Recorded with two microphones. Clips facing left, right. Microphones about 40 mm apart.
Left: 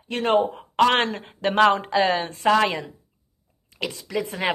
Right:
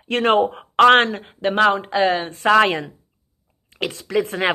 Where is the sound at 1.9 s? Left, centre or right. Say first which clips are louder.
Right 2 dB; right.